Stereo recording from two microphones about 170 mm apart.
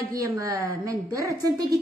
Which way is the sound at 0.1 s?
20° right (ahead or behind).